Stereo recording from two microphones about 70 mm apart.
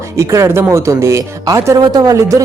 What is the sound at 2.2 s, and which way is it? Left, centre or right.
Speech, right.